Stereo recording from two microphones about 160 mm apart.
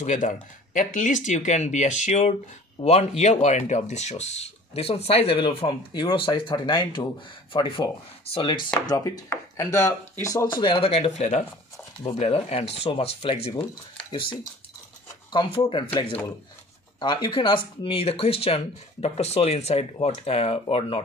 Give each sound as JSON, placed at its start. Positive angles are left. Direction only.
{"t": 0.0, "sound": "speech", "side_deg": 50}